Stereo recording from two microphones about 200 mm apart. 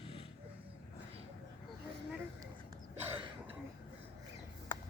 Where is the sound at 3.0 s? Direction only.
10° right (ahead or behind).